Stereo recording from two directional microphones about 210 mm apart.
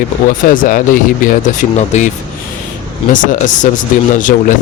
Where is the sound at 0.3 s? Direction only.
40° left (ahead or behind).